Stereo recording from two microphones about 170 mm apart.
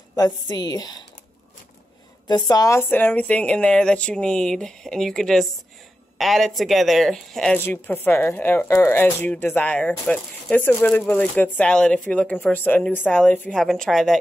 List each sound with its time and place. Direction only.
0.1 s a woman's voice: 25° left (ahead or behind)
2.2 s speech: 25° left (ahead or behind); by 14.1 s centre (ahead or behind)